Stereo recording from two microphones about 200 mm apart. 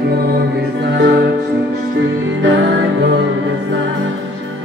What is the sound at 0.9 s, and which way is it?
Music, 60° right (ahead or behind).